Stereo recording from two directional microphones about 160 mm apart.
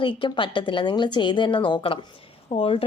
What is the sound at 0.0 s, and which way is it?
A woman's voice, 30° left (ahead or behind).